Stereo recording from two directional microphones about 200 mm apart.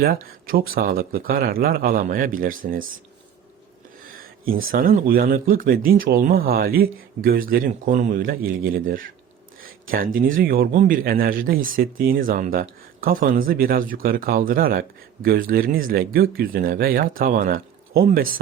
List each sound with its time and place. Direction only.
0.0 s speech: 45° right (ahead or behind)
4.7 s speech: 45° right (ahead or behind)